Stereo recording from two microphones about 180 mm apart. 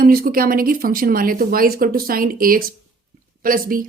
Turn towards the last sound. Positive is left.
turn(degrees=-50)  # may be behind; listen again after turning